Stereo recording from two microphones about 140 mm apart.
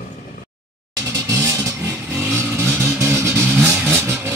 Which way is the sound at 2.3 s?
20° right (ahead or behind).